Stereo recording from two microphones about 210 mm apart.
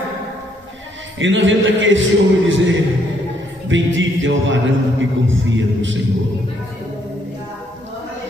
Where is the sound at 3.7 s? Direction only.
65° right (ahead or behind).